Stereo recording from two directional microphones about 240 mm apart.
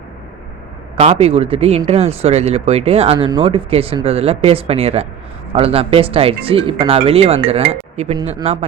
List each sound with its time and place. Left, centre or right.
0.9 s speech: right